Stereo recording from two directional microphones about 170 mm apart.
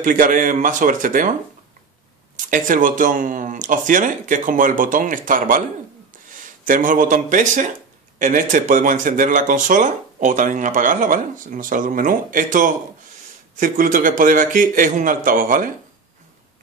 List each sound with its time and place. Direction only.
0.0 s speech: 50° right (ahead or behind)
2.3 s speech: 50° right (ahead or behind)